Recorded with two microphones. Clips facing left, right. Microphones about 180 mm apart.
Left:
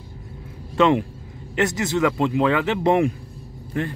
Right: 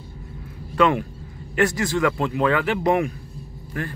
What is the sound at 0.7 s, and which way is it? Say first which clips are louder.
Speech: left 2 dB; 25° left (ahead or behind).